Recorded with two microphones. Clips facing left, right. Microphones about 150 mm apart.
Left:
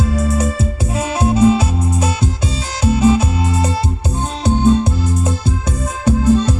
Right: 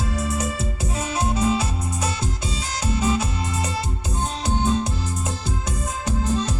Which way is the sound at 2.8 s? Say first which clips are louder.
Left 10 dB; 30° left (ahead or behind).